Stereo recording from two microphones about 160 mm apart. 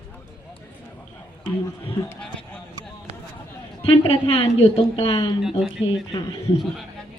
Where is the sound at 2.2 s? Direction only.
5° left (ahead or behind).